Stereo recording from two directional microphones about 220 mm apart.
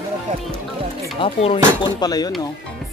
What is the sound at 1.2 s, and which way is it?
Speech, 25° left (ahead or behind).